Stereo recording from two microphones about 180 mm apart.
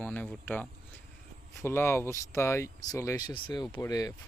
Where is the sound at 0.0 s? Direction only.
5° left (ahead or behind).